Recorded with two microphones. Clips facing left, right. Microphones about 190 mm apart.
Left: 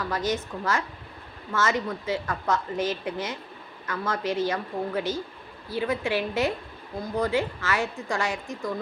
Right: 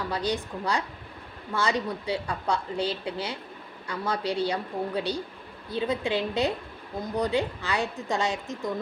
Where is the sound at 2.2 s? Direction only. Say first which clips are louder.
Left 1 dB; 15° right (ahead or behind).